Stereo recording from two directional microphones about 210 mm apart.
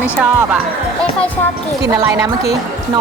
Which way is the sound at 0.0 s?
5° right (ahead or behind).